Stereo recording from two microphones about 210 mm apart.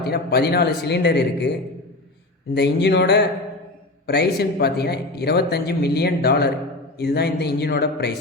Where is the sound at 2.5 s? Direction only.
55° left (ahead or behind).